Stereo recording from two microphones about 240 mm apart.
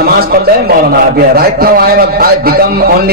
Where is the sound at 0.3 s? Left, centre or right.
Right.